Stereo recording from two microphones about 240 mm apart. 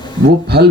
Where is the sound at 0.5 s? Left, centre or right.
Right.